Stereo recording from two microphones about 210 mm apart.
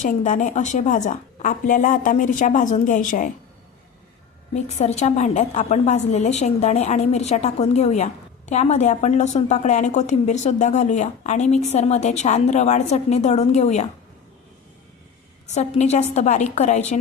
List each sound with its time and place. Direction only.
0.0 s a woman's voice: 35° left (ahead or behind)
4.5 s a woman's voice: 30° left (ahead or behind)
15.5 s a woman's voice: 30° left (ahead or behind)